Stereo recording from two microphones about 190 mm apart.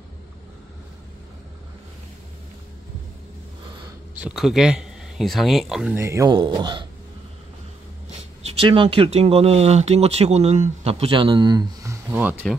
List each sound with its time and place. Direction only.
4.1 s speech: 5° right (ahead or behind)
5.9 s speech: 15° right (ahead or behind)
8.5 s speech: 30° right (ahead or behind); by 12.4 s 10° right (ahead or behind)